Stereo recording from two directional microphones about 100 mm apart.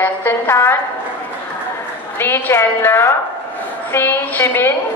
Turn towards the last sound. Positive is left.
turn(degrees=20)  # may be behind; listen again after turning